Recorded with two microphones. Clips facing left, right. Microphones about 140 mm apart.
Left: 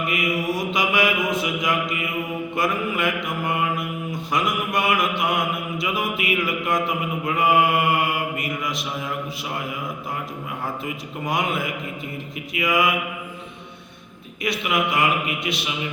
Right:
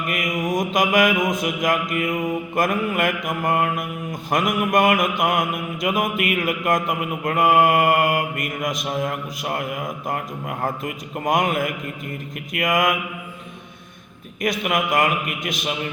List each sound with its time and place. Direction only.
0.1 s mantra: 45° right (ahead or behind)
14.4 s mantra: 45° right (ahead or behind)